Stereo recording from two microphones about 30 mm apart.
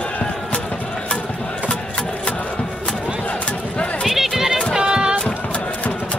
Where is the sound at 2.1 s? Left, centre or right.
Left.